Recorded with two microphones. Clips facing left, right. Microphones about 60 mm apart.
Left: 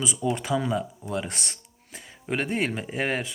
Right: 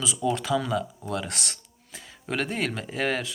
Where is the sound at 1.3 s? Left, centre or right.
Right.